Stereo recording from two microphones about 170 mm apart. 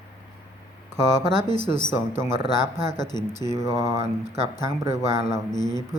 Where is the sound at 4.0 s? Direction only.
40° right (ahead or behind).